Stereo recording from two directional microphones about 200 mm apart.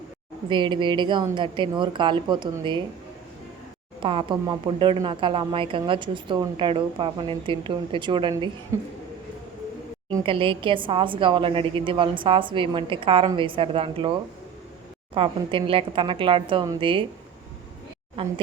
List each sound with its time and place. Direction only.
0.4 s a woman's voice: 25° right (ahead or behind)
4.0 s a woman's voice: 25° right (ahead or behind)
10.1 s a woman's voice: 20° right (ahead or behind)
15.1 s a woman's voice: 25° right (ahead or behind)
18.2 s a woman's voice: 25° right (ahead or behind)